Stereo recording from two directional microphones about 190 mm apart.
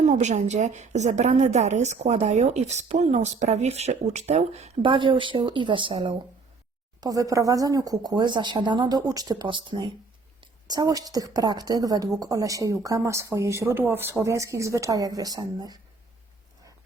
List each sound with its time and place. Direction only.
0.0 s a woman's voice: 35° right (ahead or behind); by 15.8 s 20° right (ahead or behind)